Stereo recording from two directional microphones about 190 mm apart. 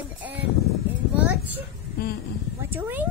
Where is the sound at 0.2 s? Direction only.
10° right (ahead or behind).